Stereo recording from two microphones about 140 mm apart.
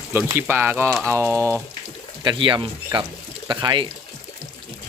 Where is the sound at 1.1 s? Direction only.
20° right (ahead or behind).